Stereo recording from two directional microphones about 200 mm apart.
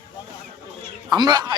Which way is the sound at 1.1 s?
20° right (ahead or behind).